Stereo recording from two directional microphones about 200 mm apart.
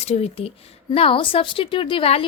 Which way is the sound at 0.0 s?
30° left (ahead or behind).